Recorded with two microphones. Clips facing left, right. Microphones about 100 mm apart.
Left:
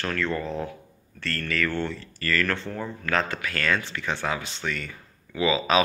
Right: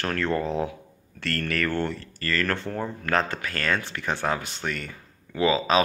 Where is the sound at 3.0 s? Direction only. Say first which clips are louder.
Even; 40° right (ahead or behind).